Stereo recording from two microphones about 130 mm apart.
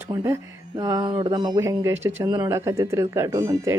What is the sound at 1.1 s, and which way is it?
Speech, 40° right (ahead or behind).